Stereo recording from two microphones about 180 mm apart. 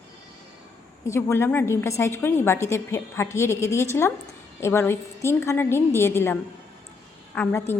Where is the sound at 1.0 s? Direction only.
15° left (ahead or behind).